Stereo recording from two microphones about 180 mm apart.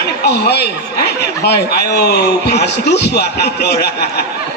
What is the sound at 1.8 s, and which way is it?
A man's voice, 60° left (ahead or behind).